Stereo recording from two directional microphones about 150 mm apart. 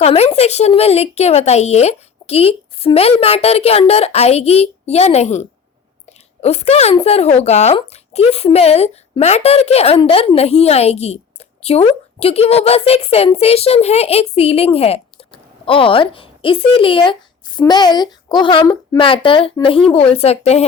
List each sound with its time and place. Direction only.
0.0 s a woman's voice: 40° left (ahead or behind)